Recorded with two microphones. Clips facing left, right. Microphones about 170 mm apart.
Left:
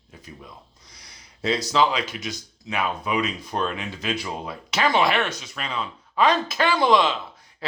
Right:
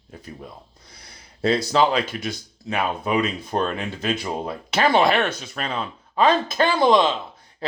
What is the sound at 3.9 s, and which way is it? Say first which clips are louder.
Speech: right 3 dB; 55° right (ahead or behind).